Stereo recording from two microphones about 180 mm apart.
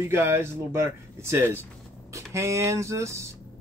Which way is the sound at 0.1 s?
15° right (ahead or behind).